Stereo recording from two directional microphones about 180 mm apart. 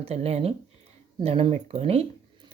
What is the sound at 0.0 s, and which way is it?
Speech, 35° right (ahead or behind).